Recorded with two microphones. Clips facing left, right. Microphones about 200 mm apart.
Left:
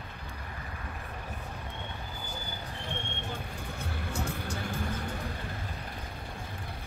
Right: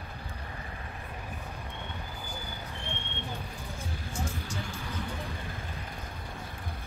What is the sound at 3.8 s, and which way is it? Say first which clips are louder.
Music: left 2 dB; 65° left (ahead or behind).